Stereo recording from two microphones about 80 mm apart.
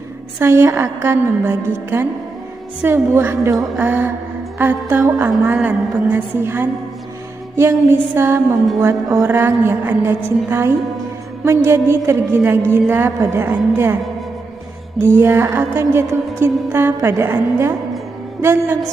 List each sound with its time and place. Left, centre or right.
0.4 s music: right
2.8 s a woman's voice: right
7.5 s music: right
9.6 s a woman's voice: right
11.4 s music: right
12.7 s a woman's voice: right
13.2 s music: right
13.5 s a woman's voice: right
15.0 s music: right